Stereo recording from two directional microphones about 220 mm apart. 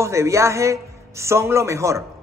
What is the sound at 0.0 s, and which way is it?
A man's voice, 15° right (ahead or behind).